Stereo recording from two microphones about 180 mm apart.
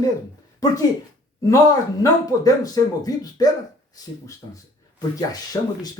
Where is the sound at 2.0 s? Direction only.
20° left (ahead or behind).